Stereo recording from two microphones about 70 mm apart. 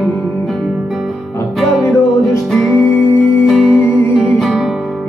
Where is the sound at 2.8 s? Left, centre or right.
Left.